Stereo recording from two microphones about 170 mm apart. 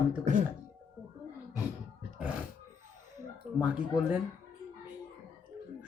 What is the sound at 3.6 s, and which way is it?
Speech, 5° right (ahead or behind).